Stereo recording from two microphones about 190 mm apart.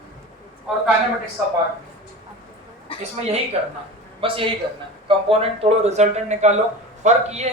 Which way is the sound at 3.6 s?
35° right (ahead or behind).